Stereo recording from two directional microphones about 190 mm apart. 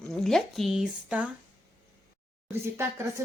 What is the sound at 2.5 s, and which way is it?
Speech, 15° right (ahead or behind).